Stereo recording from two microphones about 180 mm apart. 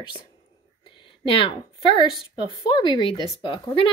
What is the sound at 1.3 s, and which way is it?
Speech, 30° left (ahead or behind).